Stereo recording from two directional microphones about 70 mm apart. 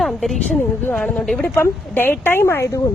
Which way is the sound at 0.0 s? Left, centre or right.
Centre.